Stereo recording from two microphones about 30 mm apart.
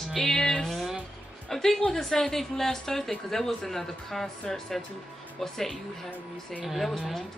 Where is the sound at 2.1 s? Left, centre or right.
Centre.